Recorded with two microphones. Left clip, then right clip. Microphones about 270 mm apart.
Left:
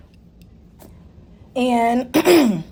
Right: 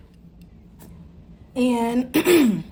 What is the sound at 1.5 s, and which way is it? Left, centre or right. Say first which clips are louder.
A woman's voice: left 5 dB; left.